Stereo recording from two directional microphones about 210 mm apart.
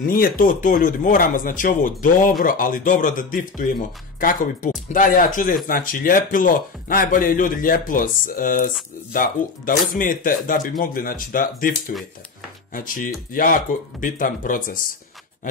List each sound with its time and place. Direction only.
0.0 s speech: 45° left (ahead or behind)
12.7 s speech: 40° left (ahead or behind)